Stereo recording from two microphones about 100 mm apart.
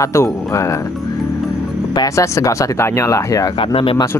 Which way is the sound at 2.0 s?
35° left (ahead or behind).